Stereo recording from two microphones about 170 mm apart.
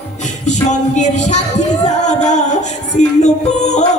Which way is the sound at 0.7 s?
45° left (ahead or behind).